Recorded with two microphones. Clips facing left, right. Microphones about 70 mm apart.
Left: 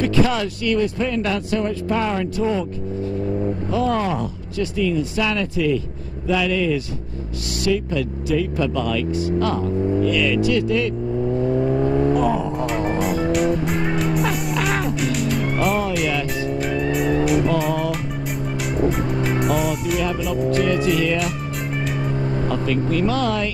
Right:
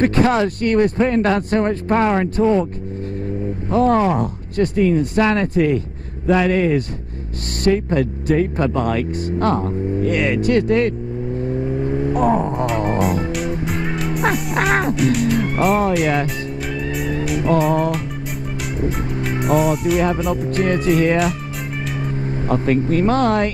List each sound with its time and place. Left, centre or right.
0.0 s speech: right
3.7 s speech: right
11.4 s vehicle: left
12.2 s speech: right
12.5 s music: centre
14.5 s music: right
15.1 s music: centre
16.7 s vehicle: centre
19.2 s speech: centre
20.6 s speech: right
22.5 s speech: right